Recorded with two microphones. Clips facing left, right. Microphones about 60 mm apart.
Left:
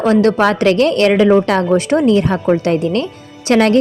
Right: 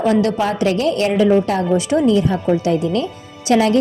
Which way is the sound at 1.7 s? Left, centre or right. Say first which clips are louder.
Left 2 dB; left.